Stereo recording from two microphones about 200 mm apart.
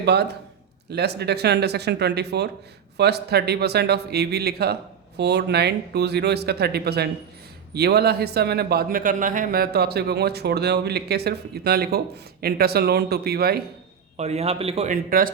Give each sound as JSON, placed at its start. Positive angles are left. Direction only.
{"t": 0.0, "sound": "a man's voice", "side_deg": -55}
{"t": 14.2, "sound": "a man's voice", "side_deg": -30}